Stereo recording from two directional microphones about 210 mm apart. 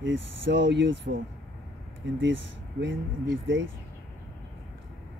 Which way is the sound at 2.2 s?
60° right (ahead or behind).